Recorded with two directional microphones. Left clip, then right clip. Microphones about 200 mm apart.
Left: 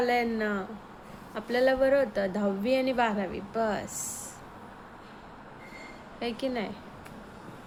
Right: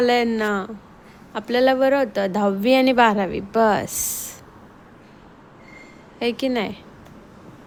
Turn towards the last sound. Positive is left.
turn(degrees=-40)  # may be behind; listen again after turning